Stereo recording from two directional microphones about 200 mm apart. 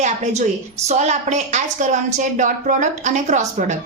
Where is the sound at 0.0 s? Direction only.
35° right (ahead or behind).